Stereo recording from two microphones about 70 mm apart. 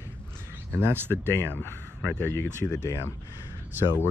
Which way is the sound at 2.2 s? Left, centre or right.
Left.